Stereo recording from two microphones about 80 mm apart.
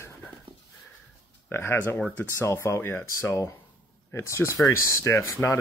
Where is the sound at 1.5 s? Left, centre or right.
Left.